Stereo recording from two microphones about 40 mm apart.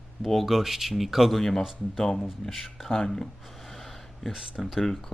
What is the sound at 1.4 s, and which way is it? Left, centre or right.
Speech, centre.